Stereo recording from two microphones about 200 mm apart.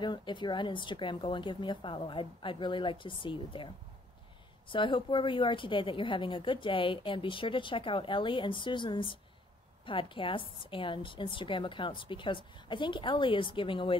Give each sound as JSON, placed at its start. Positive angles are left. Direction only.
{"t": 0.0, "sound": "a woman's voice", "side_deg": 25}